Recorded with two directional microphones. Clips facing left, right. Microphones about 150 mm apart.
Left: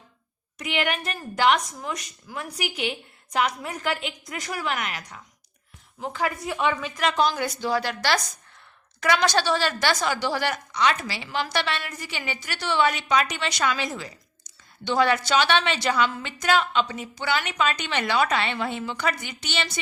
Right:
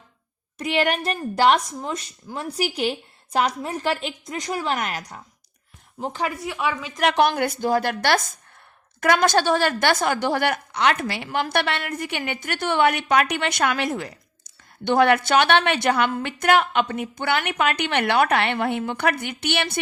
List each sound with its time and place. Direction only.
0.6 s speech: 40° right (ahead or behind)
6.4 s a woman's voice: 5° right (ahead or behind)
7.0 s a woman's voice: 65° right (ahead or behind)